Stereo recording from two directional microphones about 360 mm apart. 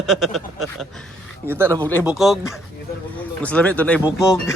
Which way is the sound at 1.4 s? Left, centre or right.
Centre.